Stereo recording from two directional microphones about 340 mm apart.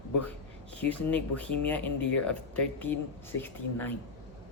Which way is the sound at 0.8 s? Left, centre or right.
Centre.